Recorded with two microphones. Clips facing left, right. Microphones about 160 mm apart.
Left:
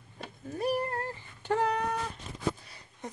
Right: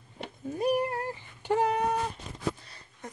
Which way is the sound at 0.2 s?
15° right (ahead or behind).